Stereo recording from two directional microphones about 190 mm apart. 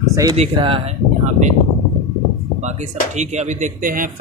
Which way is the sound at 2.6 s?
35° right (ahead or behind).